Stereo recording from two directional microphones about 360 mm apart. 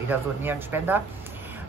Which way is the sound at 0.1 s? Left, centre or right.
Centre.